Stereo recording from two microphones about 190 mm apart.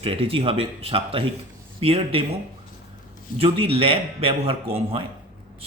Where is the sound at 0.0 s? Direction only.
30° right (ahead or behind).